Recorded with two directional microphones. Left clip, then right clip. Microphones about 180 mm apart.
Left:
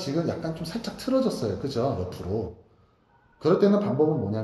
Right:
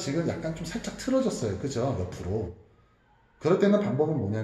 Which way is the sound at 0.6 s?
10° left (ahead or behind).